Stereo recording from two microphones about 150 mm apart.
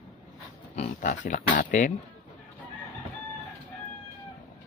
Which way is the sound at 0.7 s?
50° left (ahead or behind).